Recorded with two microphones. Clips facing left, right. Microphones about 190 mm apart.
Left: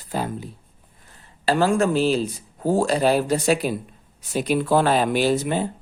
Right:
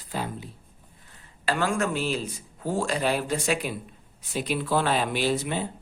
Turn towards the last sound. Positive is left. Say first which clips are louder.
# left 6 dB
turn(degrees=45)  # may be behind; listen again after turning